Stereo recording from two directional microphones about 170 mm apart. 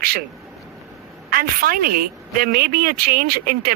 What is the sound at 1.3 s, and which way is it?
Speech, 60° right (ahead or behind).